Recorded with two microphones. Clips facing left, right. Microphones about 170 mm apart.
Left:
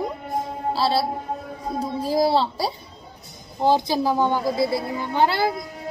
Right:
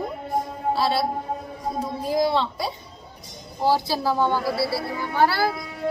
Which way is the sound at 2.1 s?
35° left (ahead or behind).